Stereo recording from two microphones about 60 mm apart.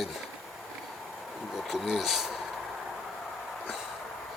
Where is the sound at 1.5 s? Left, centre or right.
Centre.